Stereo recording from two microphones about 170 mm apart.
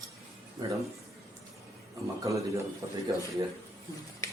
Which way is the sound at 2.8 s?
20° right (ahead or behind).